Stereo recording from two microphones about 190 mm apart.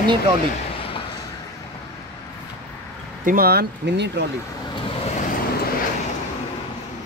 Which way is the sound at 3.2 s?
50° right (ahead or behind).